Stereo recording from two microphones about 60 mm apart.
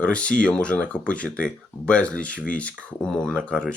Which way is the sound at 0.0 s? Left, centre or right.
Centre.